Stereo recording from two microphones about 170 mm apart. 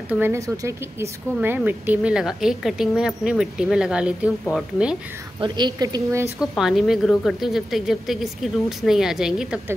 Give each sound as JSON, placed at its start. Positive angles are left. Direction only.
{"t": 0.1, "sound": "a woman's voice", "side_deg": -15}
{"t": 5.4, "sound": "a woman's voice", "side_deg": -25}
{"t": 6.4, "sound": "a woman's voice", "side_deg": 0}